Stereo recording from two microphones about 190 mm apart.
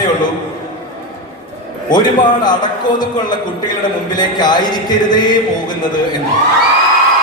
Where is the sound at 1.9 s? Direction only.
25° left (ahead or behind).